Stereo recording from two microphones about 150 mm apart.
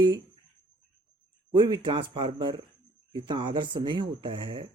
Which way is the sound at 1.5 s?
30° right (ahead or behind).